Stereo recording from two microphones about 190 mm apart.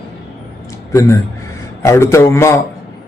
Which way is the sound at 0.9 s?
15° left (ahead or behind).